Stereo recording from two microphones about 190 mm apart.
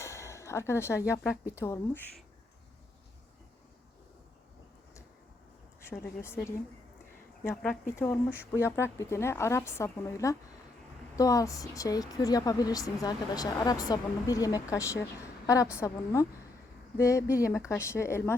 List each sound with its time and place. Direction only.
0.0 s a sound: 15° left (ahead or behind)
1.5 s speech: 15° left (ahead or behind)
6.2 s speech: 15° left (ahead or behind)
8.3 s speech: 10° right (ahead or behind)
8.6 s a woman's voice: 15° left (ahead or behind)